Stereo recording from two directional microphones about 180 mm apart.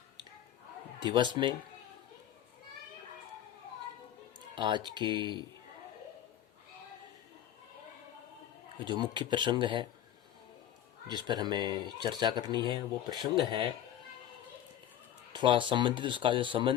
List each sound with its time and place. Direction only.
0.9 s speech: 25° right (ahead or behind)
4.5 s speech: 25° right (ahead or behind)
8.8 s speech: 25° right (ahead or behind)
11.1 s speech: 25° right (ahead or behind)
15.3 s speech: 25° right (ahead or behind)